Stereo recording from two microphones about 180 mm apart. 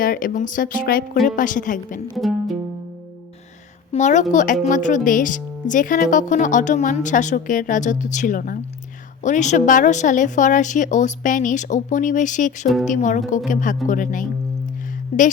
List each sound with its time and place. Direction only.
0.0 s speech: 50° left (ahead or behind)
2.1 s music: centre (ahead or behind)
3.9 s speech: 40° left (ahead or behind)